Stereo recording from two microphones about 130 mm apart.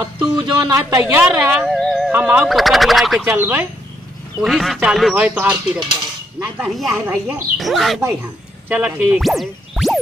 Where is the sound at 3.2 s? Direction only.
15° right (ahead or behind).